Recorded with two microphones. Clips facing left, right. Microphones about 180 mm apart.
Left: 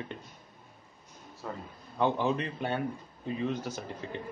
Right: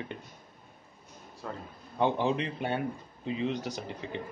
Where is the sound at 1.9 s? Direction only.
15° right (ahead or behind).